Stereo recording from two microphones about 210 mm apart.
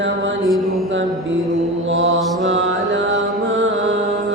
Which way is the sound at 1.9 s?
60° right (ahead or behind).